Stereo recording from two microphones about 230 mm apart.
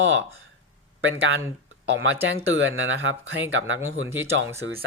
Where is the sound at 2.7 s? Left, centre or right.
Right.